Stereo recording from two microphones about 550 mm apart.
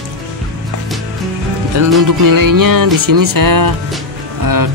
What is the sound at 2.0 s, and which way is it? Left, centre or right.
Music, right.